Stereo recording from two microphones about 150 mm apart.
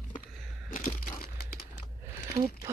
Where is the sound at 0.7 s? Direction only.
70° left (ahead or behind).